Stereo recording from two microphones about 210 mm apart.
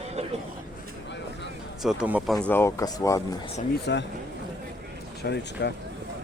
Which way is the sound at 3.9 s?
55° left (ahead or behind).